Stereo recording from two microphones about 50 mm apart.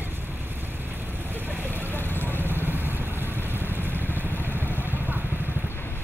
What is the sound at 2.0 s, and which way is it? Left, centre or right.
Vehicle, left.